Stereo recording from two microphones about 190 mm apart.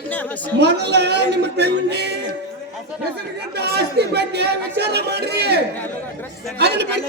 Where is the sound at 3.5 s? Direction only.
60° right (ahead or behind).